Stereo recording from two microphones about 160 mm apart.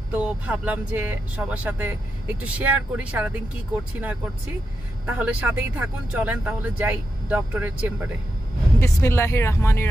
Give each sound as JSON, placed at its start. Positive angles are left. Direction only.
{"t": 0.1, "sound": "speech", "side_deg": -10}
{"t": 5.0, "sound": "speech", "side_deg": -10}
{"t": 8.7, "sound": "speech", "side_deg": 15}